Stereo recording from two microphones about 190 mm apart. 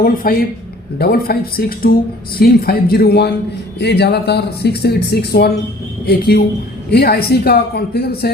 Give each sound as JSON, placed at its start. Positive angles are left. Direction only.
{"t": 0.0, "sound": "speech", "side_deg": 45}